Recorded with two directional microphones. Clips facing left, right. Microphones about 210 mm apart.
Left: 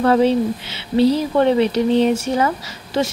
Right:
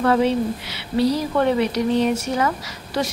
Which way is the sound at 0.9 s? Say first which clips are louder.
Left 4 dB; 25° left (ahead or behind).